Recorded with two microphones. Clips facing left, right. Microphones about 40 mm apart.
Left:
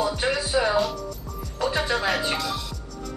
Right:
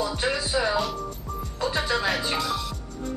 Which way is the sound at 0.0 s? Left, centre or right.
Left.